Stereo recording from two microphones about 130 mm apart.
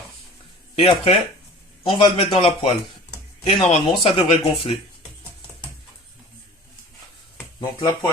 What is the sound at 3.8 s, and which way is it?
Speech, 40° left (ahead or behind).